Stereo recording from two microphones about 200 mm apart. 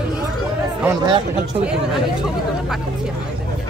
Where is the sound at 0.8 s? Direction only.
15° right (ahead or behind).